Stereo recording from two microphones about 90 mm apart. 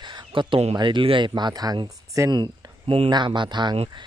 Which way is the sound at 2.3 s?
50° right (ahead or behind).